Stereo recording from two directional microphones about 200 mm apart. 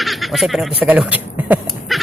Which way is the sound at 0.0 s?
Centre (ahead or behind).